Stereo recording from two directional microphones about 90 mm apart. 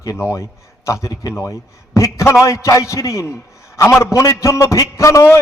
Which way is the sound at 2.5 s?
35° left (ahead or behind).